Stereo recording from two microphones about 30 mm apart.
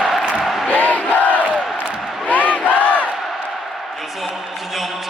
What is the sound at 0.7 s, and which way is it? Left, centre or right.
Crowd, left.